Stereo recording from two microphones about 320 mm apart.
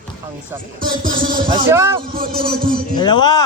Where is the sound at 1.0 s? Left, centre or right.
Right.